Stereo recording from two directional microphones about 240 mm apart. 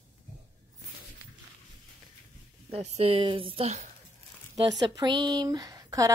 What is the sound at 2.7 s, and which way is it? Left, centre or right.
A woman's voice, right.